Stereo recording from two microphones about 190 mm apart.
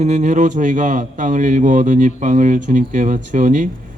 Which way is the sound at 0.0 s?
40° right (ahead or behind).